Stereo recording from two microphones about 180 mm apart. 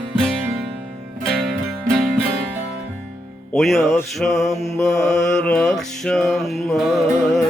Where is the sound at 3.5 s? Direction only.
Centre (ahead or behind).